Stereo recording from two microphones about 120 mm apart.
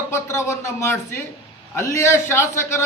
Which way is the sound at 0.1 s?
25° left (ahead or behind).